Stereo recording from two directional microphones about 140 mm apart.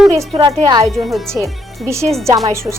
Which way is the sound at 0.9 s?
Centre (ahead or behind).